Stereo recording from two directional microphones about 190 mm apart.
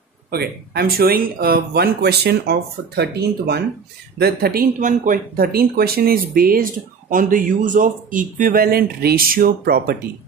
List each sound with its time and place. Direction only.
0.3 s speech: 55° right (ahead or behind)